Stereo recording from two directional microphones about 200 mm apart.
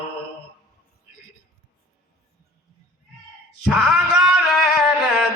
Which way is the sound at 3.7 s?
Centre (ahead or behind).